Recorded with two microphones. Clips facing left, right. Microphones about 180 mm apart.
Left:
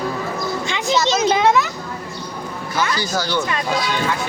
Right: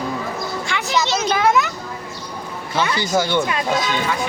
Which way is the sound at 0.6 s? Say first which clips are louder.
Left 2 dB; 20° left (ahead or behind).